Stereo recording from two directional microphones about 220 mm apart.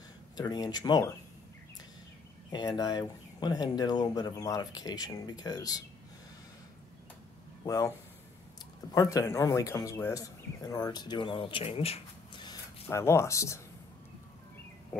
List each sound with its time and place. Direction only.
0.4 s speech: 20° left (ahead or behind)
2.5 s speech: 20° left (ahead or behind)
7.6 s speech: 15° left (ahead or behind)
8.9 s speech: 15° left (ahead or behind)
12.8 s speech: 10° left (ahead or behind)